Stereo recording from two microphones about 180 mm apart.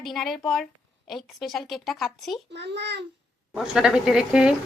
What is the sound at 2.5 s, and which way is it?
Speech, 70° right (ahead or behind).